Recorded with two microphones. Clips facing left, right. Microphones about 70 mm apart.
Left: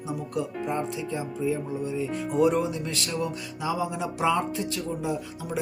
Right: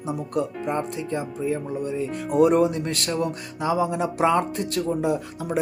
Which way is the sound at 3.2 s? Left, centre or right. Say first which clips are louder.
Right 4 dB; right.